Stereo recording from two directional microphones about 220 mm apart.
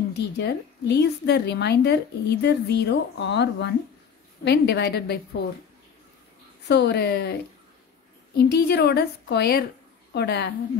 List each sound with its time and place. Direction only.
0.1 s speech: 50° left (ahead or behind)
6.7 s speech: 50° left (ahead or behind)
8.4 s speech: 50° left (ahead or behind)